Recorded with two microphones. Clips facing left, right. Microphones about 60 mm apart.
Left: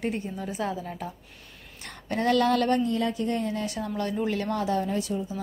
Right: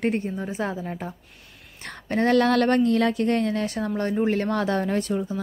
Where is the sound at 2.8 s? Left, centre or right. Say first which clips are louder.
Right 6 dB; right.